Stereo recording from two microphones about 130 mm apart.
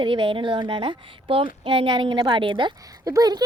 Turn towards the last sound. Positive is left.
turn(degrees=-30)  # may be behind; listen again after turning